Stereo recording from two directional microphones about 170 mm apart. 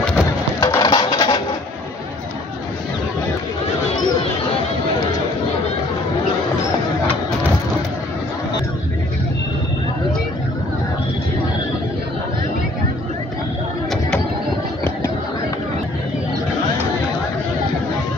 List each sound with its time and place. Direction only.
0.6 s coin: 20° left (ahead or behind)